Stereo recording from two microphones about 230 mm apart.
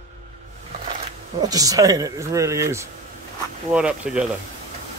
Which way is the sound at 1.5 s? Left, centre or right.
Centre.